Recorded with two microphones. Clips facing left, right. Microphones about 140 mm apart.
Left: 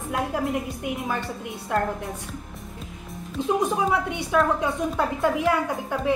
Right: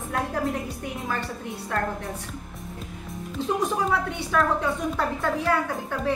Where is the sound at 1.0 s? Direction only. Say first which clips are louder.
Left 1 dB; 15° left (ahead or behind).